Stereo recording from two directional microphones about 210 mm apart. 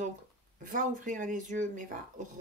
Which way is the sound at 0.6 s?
40° right (ahead or behind).